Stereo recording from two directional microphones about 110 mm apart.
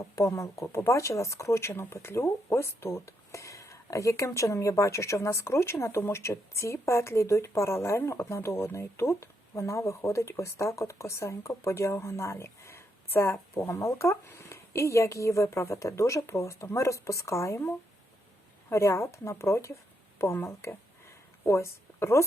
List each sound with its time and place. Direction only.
0.0 s a woman's voice: 30° left (ahead or behind)